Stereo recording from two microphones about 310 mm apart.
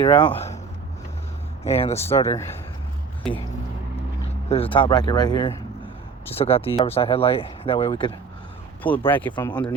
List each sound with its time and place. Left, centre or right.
0.0 s speech: centre
1.6 s speech: centre
4.4 s speech: centre